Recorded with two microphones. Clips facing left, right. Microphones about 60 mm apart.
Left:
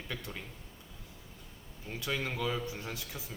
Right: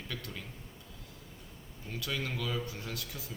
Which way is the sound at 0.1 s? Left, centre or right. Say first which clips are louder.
Left 1 dB; left.